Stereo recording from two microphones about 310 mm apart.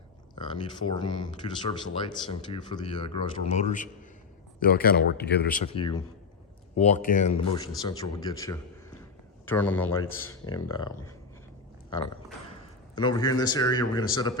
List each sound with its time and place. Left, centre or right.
0.3 s speech: centre
10.0 s speech: left
10.2 s speech: centre
13.0 s speech: centre